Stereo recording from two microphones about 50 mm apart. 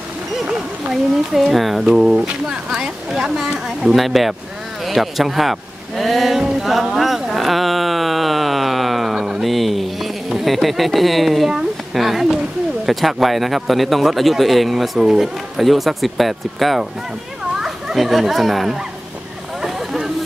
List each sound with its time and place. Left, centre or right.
1.3 s a man's voice: centre
2.2 s a woman's voice: centre
4.8 s a sound: centre
9.5 s a sound: centre
12.8 s a man's voice: centre
19.6 s vehicle: centre